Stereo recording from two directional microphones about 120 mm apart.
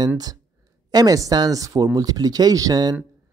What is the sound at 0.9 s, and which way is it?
Speech, 30° right (ahead or behind).